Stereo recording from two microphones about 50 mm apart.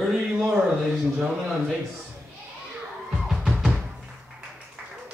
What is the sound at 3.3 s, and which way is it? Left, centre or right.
Music, centre.